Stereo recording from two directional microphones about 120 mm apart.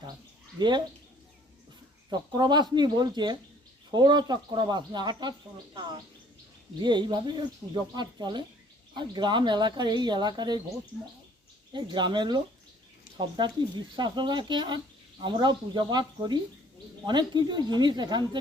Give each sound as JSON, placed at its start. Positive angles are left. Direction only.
{"t": 2.0, "sound": "speech", "side_deg": -40}
{"t": 6.8, "sound": "speech", "side_deg": -40}
{"t": 11.7, "sound": "speech", "side_deg": -40}